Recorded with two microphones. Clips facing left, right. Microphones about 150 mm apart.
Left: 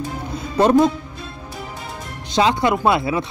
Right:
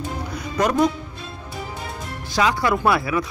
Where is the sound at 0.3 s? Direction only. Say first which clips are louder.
Left 7 dB; 25° left (ahead or behind).